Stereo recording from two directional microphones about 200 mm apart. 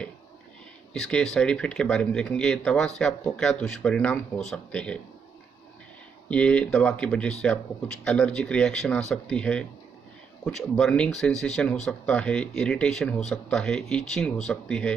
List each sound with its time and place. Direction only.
0.9 s speech: centre (ahead or behind)
6.2 s speech: 5° left (ahead or behind)